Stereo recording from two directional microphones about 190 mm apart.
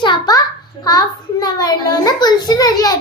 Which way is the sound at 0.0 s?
20° left (ahead or behind).